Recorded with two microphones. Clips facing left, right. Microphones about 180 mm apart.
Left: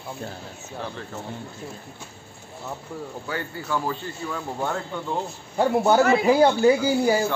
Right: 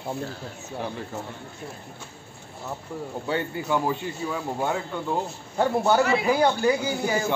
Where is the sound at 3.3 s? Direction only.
20° right (ahead or behind).